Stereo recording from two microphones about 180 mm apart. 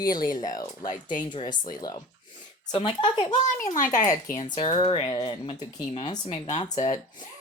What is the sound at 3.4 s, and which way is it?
Speech, 45° left (ahead or behind).